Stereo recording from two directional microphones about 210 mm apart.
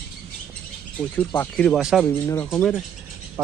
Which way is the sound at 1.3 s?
10° left (ahead or behind).